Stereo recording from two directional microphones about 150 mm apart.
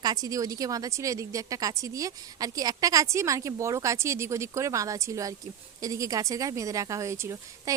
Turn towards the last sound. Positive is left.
turn(degrees=-20)  # may be behind; listen again after turning